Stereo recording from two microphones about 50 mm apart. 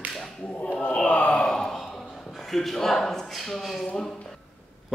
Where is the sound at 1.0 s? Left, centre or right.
Left.